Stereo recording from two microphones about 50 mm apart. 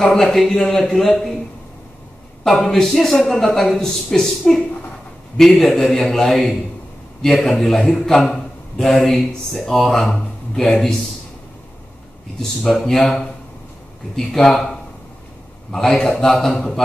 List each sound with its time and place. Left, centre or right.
0.0 s speech: centre
2.4 s a man's voice: centre
12.4 s speech: centre